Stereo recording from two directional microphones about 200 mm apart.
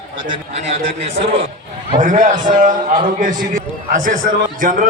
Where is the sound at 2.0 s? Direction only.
40° right (ahead or behind).